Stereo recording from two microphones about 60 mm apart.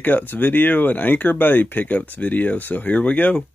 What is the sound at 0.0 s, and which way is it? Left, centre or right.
Speech, left.